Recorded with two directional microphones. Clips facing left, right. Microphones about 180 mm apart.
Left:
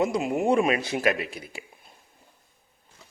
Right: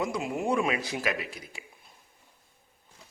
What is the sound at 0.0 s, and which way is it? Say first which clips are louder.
A man's voice: left 6 dB; 25° left (ahead or behind).